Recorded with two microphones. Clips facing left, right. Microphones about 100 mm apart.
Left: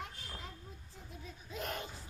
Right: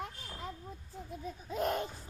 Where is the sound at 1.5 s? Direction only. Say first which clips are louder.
Right 8 dB; 45° right (ahead or behind).